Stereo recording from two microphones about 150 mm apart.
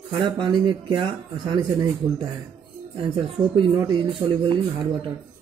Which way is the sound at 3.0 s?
35° right (ahead or behind).